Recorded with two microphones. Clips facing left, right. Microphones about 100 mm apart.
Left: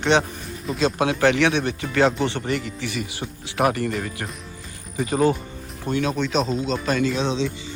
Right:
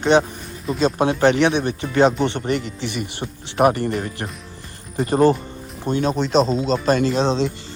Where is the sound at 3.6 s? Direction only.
35° right (ahead or behind).